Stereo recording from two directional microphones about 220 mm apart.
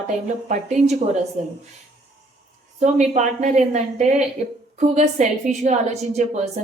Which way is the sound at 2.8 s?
30° right (ahead or behind).